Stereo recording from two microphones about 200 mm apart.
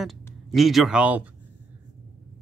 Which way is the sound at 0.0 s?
Centre (ahead or behind).